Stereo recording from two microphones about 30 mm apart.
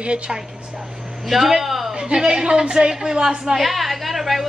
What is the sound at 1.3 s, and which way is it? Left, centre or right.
Speech, centre.